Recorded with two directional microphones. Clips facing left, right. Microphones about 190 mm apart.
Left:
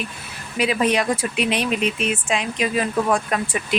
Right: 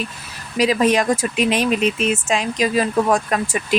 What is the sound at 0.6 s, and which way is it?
Speech, 40° right (ahead or behind).